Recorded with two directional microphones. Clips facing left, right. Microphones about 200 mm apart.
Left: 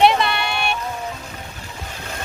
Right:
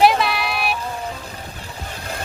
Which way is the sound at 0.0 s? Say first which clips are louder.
Even; centre (ahead or behind).